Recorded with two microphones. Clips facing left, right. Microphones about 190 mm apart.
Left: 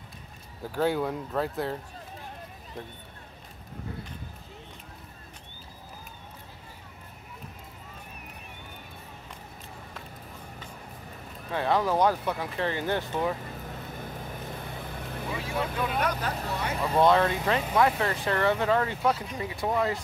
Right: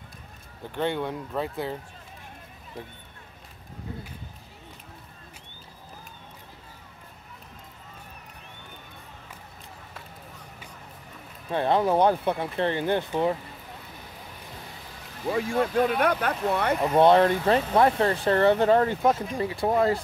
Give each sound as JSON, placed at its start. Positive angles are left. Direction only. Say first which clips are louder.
{"t": 0.7, "sound": "speech", "louder": "left 1 dB", "side_deg": 5}
{"t": 11.5, "sound": "speech", "louder": "right 3 dB", "side_deg": -25}
{"t": 14.8, "sound": "vehicle", "louder": "left 7 dB", "side_deg": 55}
{"t": 15.2, "sound": "speech", "louder": "right 7 dB", "side_deg": -50}
{"t": 16.9, "sound": "speech", "louder": "right 4 dB", "side_deg": -30}
{"t": 19.4, "sound": "speech", "louder": "right 5 dB", "side_deg": -30}